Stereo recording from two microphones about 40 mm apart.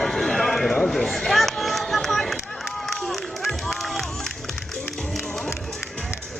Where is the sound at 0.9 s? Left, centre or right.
Centre.